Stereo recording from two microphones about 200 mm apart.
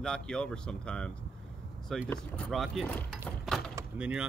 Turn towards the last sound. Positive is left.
turn(degrees=-5)  # may be behind; listen again after turning